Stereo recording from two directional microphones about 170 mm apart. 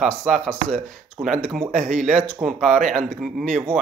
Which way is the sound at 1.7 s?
45° right (ahead or behind).